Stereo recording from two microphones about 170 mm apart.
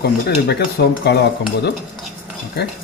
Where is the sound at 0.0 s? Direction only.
75° left (ahead or behind).